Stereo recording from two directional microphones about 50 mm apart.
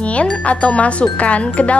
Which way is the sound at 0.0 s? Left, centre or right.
Left.